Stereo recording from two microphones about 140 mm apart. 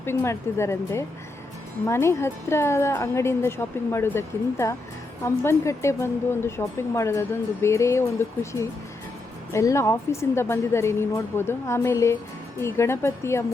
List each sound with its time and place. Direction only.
0.0 s a woman's voice: 15° left (ahead or behind)